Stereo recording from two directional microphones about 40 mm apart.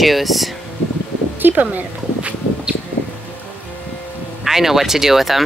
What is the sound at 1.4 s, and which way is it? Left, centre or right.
Speech, right.